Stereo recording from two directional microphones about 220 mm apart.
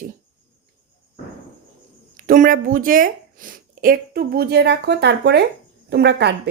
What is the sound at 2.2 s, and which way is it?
A woman's voice, 40° right (ahead or behind).